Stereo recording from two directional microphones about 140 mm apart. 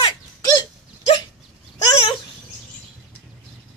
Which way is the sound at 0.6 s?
40° left (ahead or behind).